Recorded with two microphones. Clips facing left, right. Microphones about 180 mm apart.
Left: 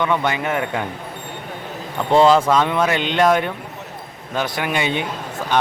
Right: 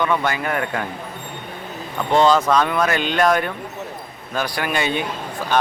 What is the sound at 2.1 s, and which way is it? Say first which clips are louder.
Speech: left 2 dB; centre (ahead or behind).